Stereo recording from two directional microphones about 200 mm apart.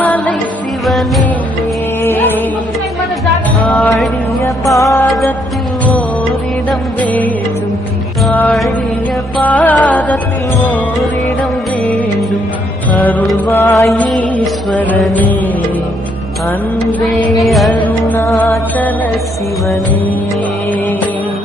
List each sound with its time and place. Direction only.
0.0 s music: 5° left (ahead or behind)
3.7 s mantra: centre (ahead or behind)
4.8 s music: 15° left (ahead or behind)
5.0 s music: centre (ahead or behind)
6.7 s music: 5° left (ahead or behind)
13.0 s music: 10° left (ahead or behind)
17.3 s music: centre (ahead or behind)